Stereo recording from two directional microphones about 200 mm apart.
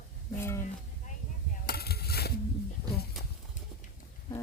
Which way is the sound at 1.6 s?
50° left (ahead or behind).